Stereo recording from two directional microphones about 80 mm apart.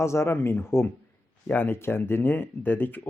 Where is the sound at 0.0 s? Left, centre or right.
Left.